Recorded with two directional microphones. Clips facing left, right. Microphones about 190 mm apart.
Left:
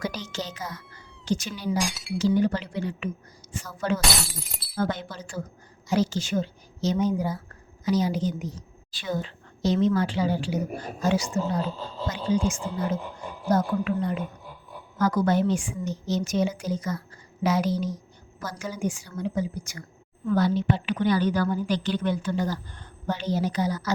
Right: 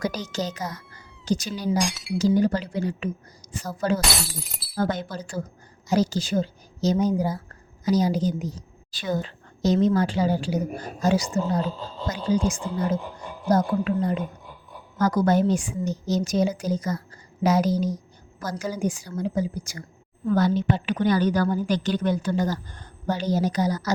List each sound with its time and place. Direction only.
0.0 s a woman's voice: 40° right (ahead or behind)
1.8 s speech: centre (ahead or behind)
2.1 s a woman's voice: 40° right (ahead or behind)
4.0 s speech: centre (ahead or behind)
4.8 s a woman's voice: 40° right (ahead or behind)